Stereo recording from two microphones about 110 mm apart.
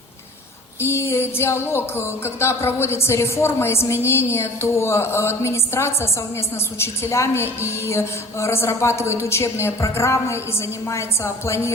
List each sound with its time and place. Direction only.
0.8 s music: 20° left (ahead or behind)